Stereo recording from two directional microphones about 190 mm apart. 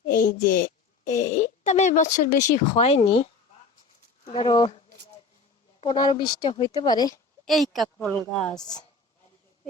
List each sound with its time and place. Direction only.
0.1 s a woman's voice: 45° left (ahead or behind); by 3.2 s 30° left (ahead or behind)
4.2 s a sound: 35° left (ahead or behind)
4.4 s speech: 25° left (ahead or behind)
5.8 s speech: 25° left (ahead or behind)
7.4 s speech: centre (ahead or behind)
8.5 s speech: 20° left (ahead or behind)